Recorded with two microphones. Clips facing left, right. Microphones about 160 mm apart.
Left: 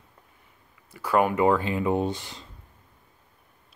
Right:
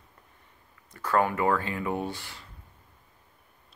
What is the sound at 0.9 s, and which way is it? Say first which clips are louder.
Speech: left 3 dB; 15° left (ahead or behind).